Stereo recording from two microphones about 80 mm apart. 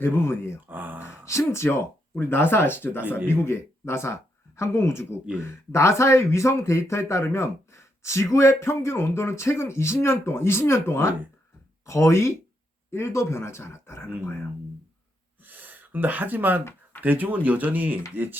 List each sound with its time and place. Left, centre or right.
0.0 s speech: left
0.7 s a sound: right
1.0 s speech: left
15.4 s gasp: right
17.0 s speech: right